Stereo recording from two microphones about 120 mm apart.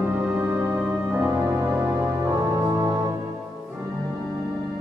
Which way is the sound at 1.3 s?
20° right (ahead or behind).